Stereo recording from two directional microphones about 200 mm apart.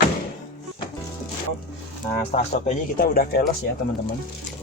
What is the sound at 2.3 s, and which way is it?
A man's voice, 35° left (ahead or behind).